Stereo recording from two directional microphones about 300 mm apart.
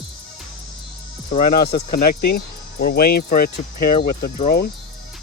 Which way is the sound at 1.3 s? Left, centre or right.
Left.